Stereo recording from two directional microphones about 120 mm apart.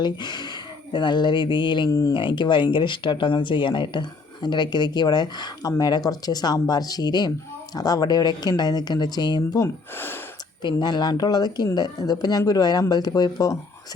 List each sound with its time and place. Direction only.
0.0 s speech: 40° left (ahead or behind)
2.1 s speech: 40° left (ahead or behind)
9.6 s speech: 20° left (ahead or behind)
10.6 s speech: 40° left (ahead or behind)